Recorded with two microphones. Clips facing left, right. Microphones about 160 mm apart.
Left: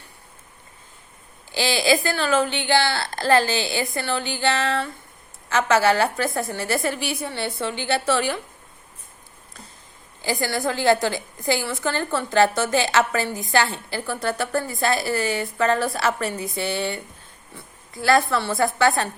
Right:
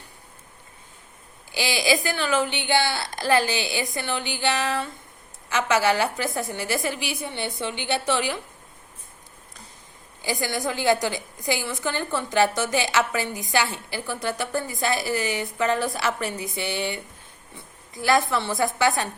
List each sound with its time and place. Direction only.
1.5 s a woman's voice: 15° right (ahead or behind)
10.2 s a woman's voice: 15° right (ahead or behind)